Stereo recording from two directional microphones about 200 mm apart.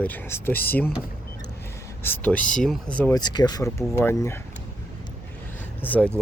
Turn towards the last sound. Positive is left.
turn(degrees=10)  # may be behind; listen again after turning